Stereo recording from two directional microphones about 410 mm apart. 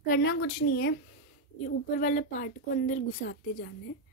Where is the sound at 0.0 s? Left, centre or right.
Left.